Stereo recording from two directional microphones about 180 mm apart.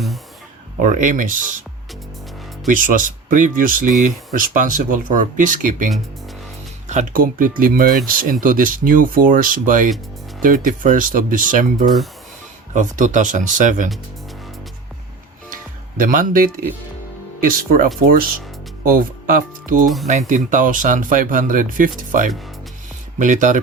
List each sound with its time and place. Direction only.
0.8 s speech: 45° right (ahead or behind)
2.6 s speech: 45° right (ahead or behind)
16.0 s speech: 50° right (ahead or behind)